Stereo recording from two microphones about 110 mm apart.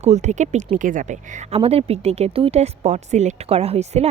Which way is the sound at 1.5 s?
65° right (ahead or behind).